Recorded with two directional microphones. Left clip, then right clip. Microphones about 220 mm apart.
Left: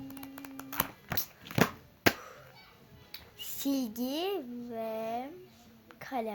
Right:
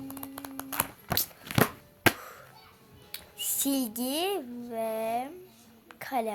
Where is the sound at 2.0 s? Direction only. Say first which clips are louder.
Right 3 dB; 40° right (ahead or behind).